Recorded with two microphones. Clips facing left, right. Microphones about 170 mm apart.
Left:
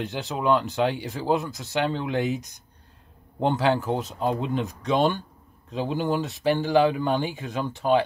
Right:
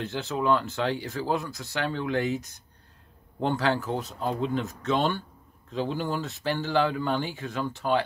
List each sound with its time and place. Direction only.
0.0 s speech: 15° left (ahead or behind)